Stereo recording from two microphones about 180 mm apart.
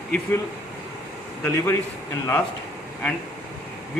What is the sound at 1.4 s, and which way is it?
Speech, 15° left (ahead or behind).